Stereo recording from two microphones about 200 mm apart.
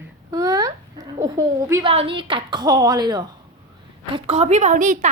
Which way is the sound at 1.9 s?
25° right (ahead or behind).